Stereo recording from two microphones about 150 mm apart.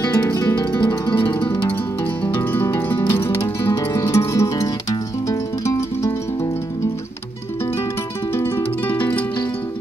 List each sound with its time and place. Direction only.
0.0 s music: 20° left (ahead or behind)
2.2 s music: 15° left (ahead or behind)
8.4 s music: 15° left (ahead or behind)